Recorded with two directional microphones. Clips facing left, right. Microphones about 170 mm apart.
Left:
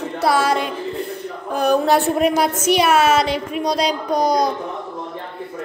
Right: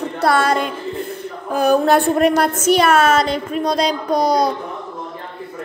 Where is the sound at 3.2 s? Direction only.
5° left (ahead or behind).